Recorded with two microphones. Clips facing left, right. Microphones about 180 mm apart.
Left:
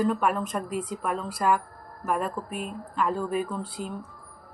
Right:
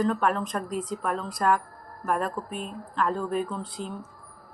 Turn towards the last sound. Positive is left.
turn(degrees=5)  # may be behind; listen again after turning